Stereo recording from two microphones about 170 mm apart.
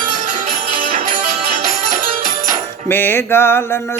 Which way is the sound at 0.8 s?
50° right (ahead or behind).